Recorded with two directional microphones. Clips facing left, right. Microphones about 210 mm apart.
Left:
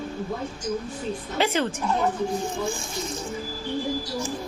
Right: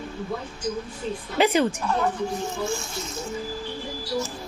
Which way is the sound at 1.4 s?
15° right (ahead or behind).